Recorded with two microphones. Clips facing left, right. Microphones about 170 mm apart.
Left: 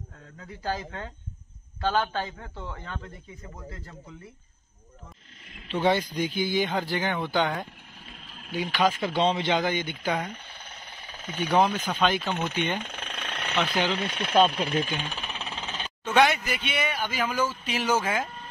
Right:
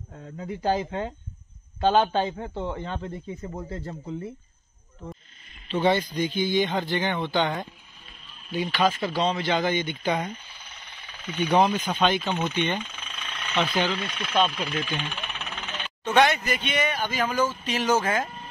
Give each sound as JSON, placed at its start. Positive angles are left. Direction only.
{"t": 0.2, "sound": "a man's voice", "side_deg": -20}
{"t": 5.7, "sound": "speech", "side_deg": 10}
{"t": 9.1, "sound": "a man's voice", "side_deg": 25}
{"t": 9.7, "sound": "speech", "side_deg": 10}
{"t": 10.3, "sound": "mechanisms", "side_deg": 50}
{"t": 11.4, "sound": "speech", "side_deg": 0}
{"t": 12.8, "sound": "jackhammer", "side_deg": 60}
{"t": 13.6, "sound": "speech", "side_deg": 10}
{"t": 14.0, "sound": "speech", "side_deg": 35}
{"t": 15.0, "sound": "music", "side_deg": 40}
{"t": 16.2, "sound": "speech", "side_deg": 5}